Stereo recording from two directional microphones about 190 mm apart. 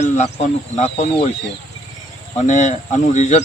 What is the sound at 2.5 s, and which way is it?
Speech, 40° left (ahead or behind).